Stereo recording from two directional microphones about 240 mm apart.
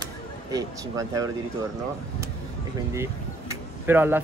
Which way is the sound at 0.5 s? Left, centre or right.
Centre.